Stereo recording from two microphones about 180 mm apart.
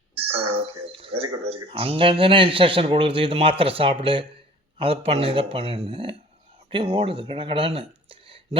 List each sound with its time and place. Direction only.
0.2 s speech: 30° right (ahead or behind)